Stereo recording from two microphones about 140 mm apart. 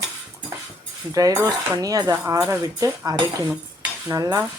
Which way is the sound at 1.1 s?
25° right (ahead or behind).